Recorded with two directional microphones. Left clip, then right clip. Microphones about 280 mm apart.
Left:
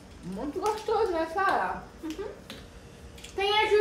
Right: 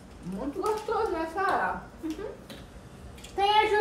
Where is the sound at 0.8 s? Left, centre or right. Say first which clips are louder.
Left 2 dB; left.